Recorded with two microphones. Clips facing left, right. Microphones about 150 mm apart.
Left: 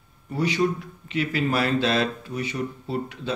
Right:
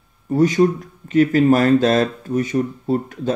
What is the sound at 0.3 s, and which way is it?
Speech, 45° right (ahead or behind).